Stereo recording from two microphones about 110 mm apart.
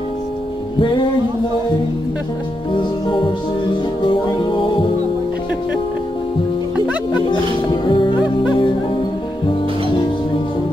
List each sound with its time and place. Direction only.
4.0 s music: 45° left (ahead or behind)
7.2 s music: 45° left (ahead or behind)